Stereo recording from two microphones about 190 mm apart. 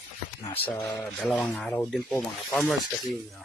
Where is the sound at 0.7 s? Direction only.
5° left (ahead or behind).